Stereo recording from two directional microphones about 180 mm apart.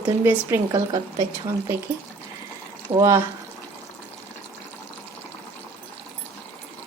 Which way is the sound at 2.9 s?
15° right (ahead or behind).